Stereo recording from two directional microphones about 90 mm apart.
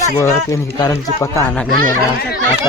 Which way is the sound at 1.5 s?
15° left (ahead or behind).